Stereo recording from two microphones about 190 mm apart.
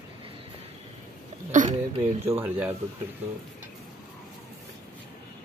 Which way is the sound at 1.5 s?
40° right (ahead or behind).